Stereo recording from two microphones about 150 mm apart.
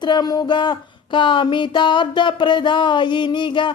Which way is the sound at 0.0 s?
30° left (ahead or behind).